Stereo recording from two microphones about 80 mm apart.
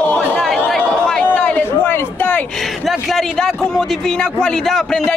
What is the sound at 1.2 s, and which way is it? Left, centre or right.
Speech, left.